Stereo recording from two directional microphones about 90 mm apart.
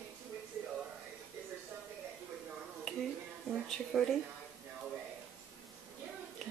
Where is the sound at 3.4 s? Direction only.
Centre (ahead or behind).